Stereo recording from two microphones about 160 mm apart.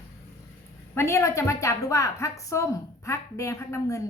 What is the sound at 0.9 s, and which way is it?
A woman's voice, 20° left (ahead or behind).